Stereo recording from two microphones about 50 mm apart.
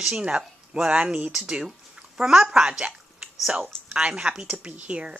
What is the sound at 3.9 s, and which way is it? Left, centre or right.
Speech, right.